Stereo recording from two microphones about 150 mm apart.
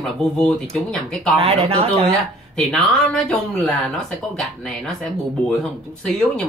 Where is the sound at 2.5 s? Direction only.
Centre (ahead or behind).